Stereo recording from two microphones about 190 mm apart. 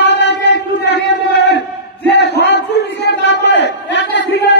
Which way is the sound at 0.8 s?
65° left (ahead or behind).